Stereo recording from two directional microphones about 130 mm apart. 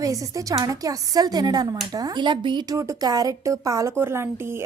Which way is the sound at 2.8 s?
25° right (ahead or behind).